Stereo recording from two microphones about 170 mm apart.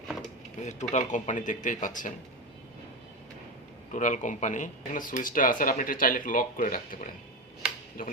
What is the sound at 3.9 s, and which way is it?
Speech, 45° left (ahead or behind).